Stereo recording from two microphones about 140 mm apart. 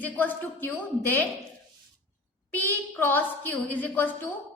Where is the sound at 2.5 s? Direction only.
15° left (ahead or behind).